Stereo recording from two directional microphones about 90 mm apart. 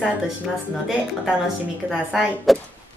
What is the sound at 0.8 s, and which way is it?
Speech, 5° right (ahead or behind).